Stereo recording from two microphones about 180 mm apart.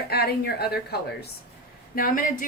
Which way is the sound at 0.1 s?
60° left (ahead or behind).